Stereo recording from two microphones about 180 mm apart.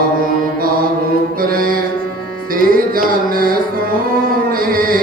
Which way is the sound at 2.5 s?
55° right (ahead or behind).